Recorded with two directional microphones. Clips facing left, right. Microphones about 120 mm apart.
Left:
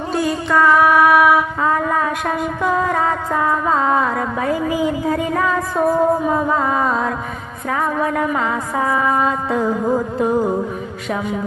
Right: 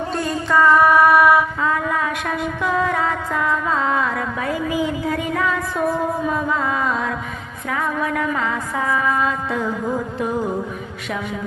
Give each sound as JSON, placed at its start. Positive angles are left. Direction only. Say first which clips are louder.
{"t": 0.1, "sound": "mantra", "louder": "left 4 dB", "side_deg": 5}
{"t": 1.6, "sound": "music", "louder": "left 3 dB", "side_deg": 35}